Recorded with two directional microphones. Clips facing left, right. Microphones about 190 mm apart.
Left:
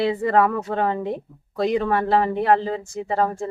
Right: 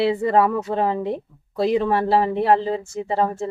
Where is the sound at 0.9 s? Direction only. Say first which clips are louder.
Right 1 dB; centre (ahead or behind).